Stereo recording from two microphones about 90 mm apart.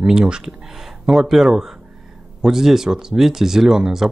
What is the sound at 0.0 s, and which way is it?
Speech, 10° right (ahead or behind).